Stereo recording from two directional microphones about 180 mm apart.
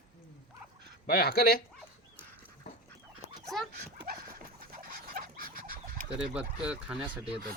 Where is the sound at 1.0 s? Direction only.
55° left (ahead or behind).